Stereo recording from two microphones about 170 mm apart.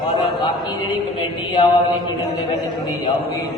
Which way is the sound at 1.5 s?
25° left (ahead or behind).